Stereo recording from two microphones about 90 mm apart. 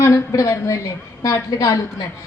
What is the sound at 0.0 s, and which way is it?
A woman's voice, 35° left (ahead or behind).